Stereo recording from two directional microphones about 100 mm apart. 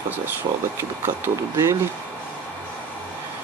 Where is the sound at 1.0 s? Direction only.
25° right (ahead or behind).